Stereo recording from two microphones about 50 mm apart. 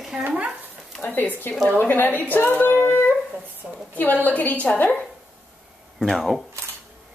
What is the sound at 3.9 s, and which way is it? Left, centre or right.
Speech, left.